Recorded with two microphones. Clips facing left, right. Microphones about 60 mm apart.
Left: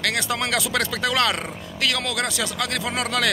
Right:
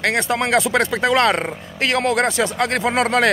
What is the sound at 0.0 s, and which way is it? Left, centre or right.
Speech, right.